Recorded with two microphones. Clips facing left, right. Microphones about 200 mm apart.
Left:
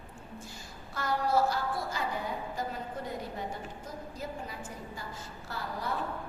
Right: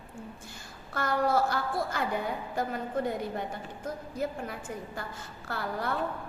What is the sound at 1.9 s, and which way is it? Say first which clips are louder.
A woman's voice: right 3 dB; 60° right (ahead or behind).